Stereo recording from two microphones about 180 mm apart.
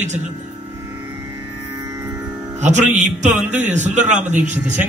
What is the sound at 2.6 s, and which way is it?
A man's voice, 40° right (ahead or behind).